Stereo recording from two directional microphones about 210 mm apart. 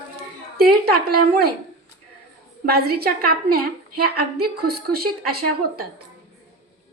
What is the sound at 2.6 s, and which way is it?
A woman's voice, 45° right (ahead or behind).